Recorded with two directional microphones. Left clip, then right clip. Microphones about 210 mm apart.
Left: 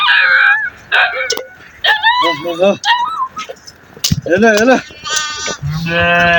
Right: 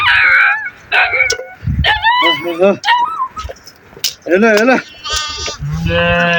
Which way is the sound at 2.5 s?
20° right (ahead or behind).